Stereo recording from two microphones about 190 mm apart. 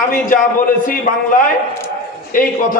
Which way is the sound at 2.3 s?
45° left (ahead or behind).